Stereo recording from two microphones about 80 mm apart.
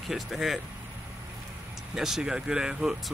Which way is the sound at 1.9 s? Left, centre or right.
Centre.